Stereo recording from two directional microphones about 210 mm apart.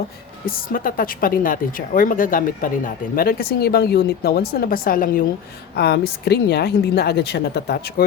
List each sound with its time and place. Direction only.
0.4 s a woman's voice: 40° left (ahead or behind)